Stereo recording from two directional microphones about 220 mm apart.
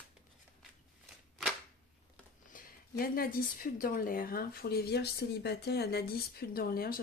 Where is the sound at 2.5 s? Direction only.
40° left (ahead or behind).